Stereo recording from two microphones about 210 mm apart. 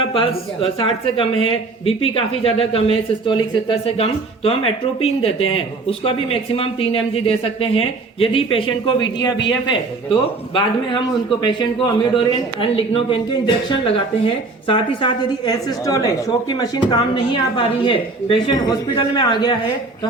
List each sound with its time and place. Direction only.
0.1 s a man's voice: 25° left (ahead or behind)